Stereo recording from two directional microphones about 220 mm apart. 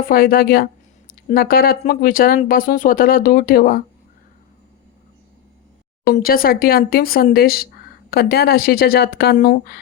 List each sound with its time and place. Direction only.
0.1 s speech: 40° left (ahead or behind)
6.1 s speech: 40° left (ahead or behind)